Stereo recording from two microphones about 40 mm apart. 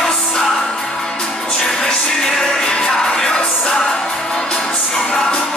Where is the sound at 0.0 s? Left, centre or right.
Centre.